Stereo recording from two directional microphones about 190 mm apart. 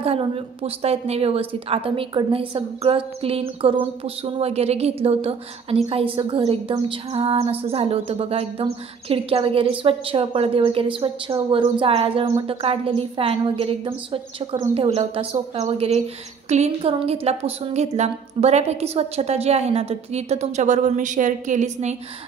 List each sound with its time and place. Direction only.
0.0 s a woman's voice: 30° right (ahead or behind)